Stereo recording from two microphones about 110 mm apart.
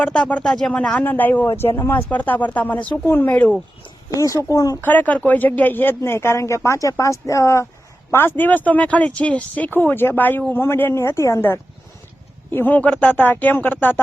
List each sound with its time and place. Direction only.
0.0 s speech: 10° left (ahead or behind)
4.1 s speech: 30° left (ahead or behind)
4.8 s speech: 15° left (ahead or behind)